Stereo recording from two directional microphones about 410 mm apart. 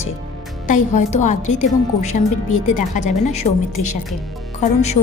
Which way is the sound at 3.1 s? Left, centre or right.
Centre.